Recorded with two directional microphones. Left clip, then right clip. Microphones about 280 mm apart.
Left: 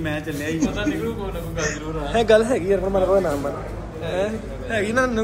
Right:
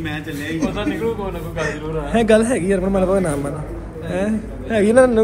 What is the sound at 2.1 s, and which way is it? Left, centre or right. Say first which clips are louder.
A man's voice: right 1 dB; right.